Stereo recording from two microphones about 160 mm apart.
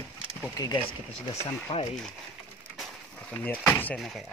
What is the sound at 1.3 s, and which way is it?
Speech, 40° left (ahead or behind).